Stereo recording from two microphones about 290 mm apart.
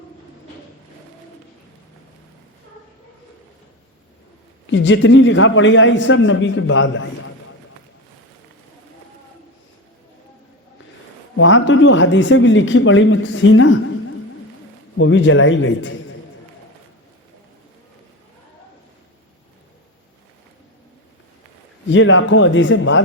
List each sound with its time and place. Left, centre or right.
4.6 s speech: left
11.3 s speech: left
14.9 s speech: left
21.8 s speech: left